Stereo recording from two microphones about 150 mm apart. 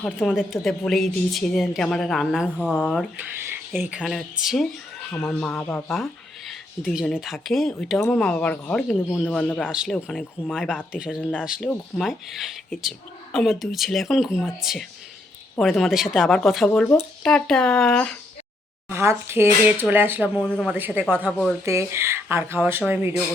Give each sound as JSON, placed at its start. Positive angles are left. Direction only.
{"t": 0.0, "sound": "speech", "side_deg": 0}
{"t": 3.4, "sound": "speech", "side_deg": -15}
{"t": 5.1, "sound": "speech", "side_deg": 10}
{"t": 9.6, "sound": "speech", "side_deg": -5}
{"t": 10.9, "sound": "speech", "side_deg": -5}
{"t": 11.2, "sound": "speech", "side_deg": 10}
{"t": 11.4, "sound": "speech", "side_deg": -5}
{"t": 18.9, "sound": "speech", "side_deg": -15}
{"t": 20.4, "sound": "speech", "side_deg": 10}
{"t": 20.7, "sound": "speech", "side_deg": -10}
{"t": 21.2, "sound": "speech", "side_deg": 5}
{"t": 21.6, "sound": "speech", "side_deg": -20}